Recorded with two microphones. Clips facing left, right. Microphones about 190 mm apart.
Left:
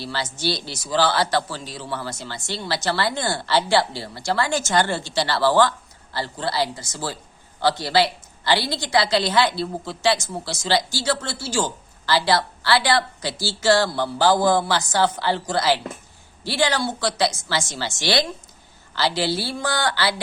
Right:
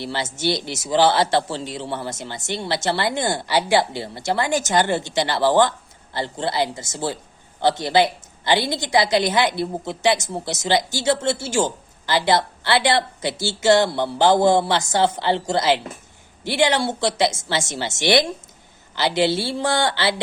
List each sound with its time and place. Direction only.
0.0 s a woman's voice: 20° right (ahead or behind)